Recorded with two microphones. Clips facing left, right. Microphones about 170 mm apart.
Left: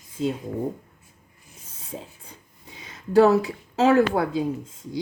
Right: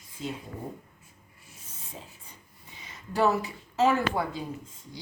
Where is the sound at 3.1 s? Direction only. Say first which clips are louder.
Left 9 dB; 90° left.